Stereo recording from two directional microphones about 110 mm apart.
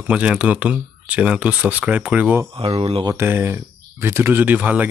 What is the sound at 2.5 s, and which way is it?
Speech, 60° right (ahead or behind).